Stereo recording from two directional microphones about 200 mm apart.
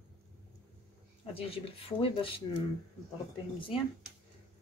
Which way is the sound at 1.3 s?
30° left (ahead or behind).